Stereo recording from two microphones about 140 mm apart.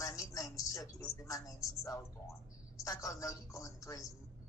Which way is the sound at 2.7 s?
25° left (ahead or behind).